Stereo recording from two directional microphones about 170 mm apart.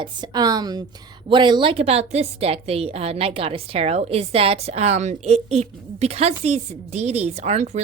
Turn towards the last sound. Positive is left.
turn(degrees=-40)  # may be behind; listen again after turning